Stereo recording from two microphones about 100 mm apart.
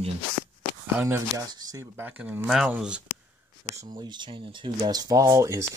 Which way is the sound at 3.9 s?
45° right (ahead or behind).